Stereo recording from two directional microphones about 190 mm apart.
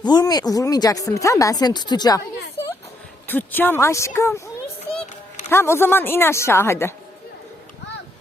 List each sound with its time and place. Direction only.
0.0 s speech: 20° left (ahead or behind)
3.2 s a woman's voice: 10° left (ahead or behind)
5.5 s a woman's voice: 15° left (ahead or behind)